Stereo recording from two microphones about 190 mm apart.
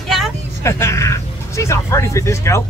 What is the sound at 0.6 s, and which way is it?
Speech, 15° left (ahead or behind).